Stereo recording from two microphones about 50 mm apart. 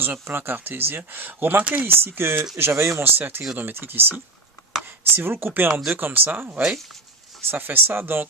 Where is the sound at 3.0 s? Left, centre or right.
Right.